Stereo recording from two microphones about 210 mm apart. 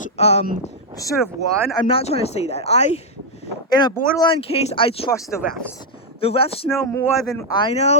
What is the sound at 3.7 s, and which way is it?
Speech, 20° left (ahead or behind).